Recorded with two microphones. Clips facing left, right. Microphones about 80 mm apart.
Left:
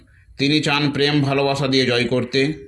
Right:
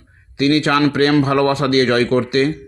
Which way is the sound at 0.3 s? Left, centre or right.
Right.